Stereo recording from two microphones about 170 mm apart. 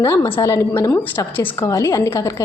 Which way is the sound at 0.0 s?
15° left (ahead or behind).